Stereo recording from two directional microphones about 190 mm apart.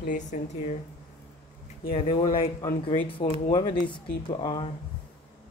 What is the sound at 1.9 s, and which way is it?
Speech, 30° left (ahead or behind).